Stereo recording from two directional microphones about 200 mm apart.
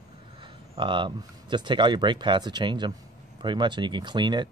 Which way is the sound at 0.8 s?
25° right (ahead or behind).